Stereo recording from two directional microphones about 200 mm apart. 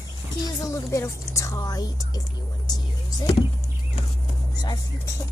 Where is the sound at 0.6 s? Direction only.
15° left (ahead or behind).